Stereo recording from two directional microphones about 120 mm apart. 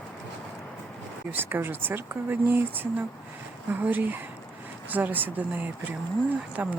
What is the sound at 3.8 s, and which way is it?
Speech, 15° right (ahead or behind).